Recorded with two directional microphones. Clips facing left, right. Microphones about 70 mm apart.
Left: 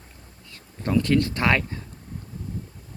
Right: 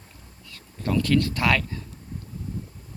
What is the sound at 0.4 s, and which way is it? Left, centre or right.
Speech, left.